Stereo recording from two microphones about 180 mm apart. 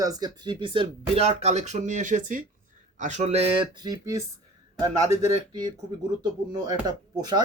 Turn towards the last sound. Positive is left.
turn(degrees=-25)  # may be behind; listen again after turning